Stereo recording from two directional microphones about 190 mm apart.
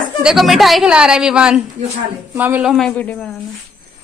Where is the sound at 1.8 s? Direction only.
35° right (ahead or behind).